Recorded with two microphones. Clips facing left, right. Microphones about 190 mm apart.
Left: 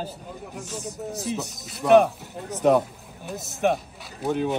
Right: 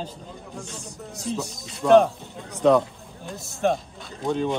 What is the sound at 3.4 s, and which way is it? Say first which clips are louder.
Speech: even; 20° left (ahead or behind).